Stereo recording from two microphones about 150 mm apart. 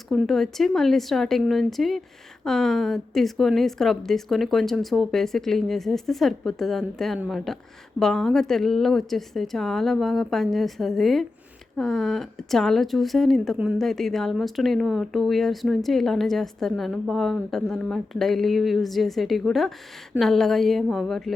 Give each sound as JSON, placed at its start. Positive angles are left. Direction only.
{"t": 0.1, "sound": "speech", "side_deg": 0}